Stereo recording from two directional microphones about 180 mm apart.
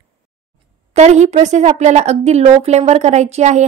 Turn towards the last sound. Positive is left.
turn(degrees=-40)  # may be behind; listen again after turning